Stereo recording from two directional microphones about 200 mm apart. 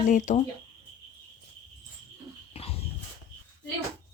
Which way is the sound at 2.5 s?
30° left (ahead or behind).